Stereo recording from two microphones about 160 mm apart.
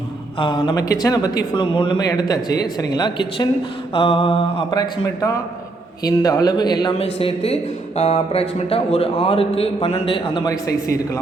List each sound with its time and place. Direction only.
0.3 s speech: 30° left (ahead or behind)
4.7 s speech: 25° left (ahead or behind)
7.0 s speech: 35° left (ahead or behind); by 11.2 s 20° left (ahead or behind)